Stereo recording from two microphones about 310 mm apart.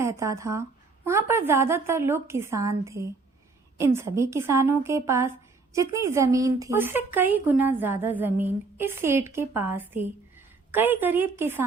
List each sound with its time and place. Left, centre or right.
0.0 s a woman's voice: centre